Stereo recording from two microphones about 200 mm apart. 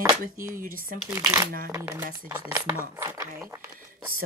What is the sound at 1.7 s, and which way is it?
Speech, 15° right (ahead or behind).